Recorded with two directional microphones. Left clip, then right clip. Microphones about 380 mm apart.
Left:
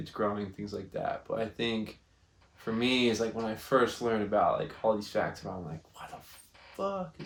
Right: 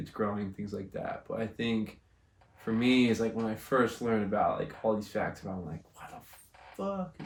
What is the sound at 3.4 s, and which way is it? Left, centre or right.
Speech, centre.